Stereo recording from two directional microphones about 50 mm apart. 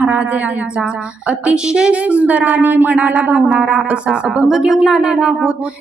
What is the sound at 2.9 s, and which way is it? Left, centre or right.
Speech, right.